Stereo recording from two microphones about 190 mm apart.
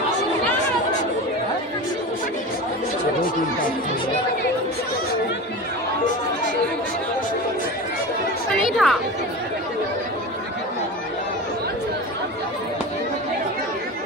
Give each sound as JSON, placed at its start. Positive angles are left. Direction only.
{"t": 8.5, "sound": "music", "side_deg": 0}